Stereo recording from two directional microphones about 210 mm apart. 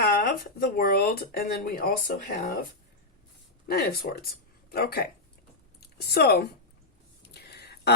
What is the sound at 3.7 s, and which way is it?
A woman's voice, 50° left (ahead or behind).